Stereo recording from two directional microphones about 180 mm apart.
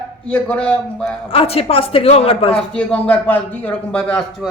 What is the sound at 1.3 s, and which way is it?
Speech, 35° left (ahead or behind).